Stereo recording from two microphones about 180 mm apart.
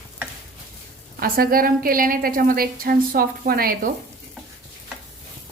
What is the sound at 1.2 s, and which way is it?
A woman's voice, 55° right (ahead or behind).